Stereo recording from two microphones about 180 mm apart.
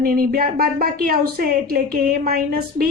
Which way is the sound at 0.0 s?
55° right (ahead or behind).